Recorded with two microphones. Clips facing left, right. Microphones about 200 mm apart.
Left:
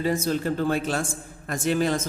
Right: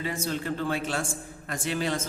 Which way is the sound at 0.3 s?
40° left (ahead or behind).